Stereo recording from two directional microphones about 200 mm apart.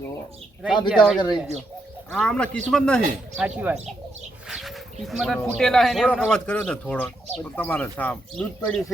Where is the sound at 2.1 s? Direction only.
5° left (ahead or behind).